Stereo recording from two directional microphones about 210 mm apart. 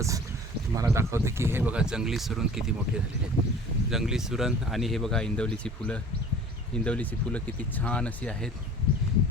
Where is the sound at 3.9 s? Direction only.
Centre (ahead or behind).